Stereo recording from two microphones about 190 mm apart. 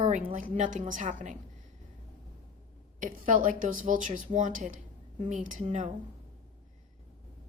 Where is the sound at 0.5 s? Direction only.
40° right (ahead or behind).